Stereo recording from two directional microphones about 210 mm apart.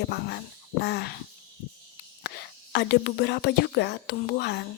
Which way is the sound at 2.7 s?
55° left (ahead or behind).